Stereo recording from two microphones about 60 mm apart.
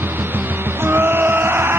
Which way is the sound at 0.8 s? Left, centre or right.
Right.